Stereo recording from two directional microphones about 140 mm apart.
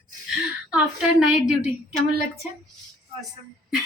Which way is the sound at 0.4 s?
5° right (ahead or behind).